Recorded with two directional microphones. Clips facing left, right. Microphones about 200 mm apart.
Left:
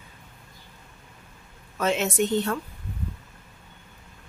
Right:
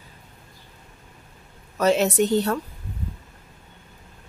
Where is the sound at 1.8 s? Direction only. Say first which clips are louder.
Right 5 dB; 40° right (ahead or behind).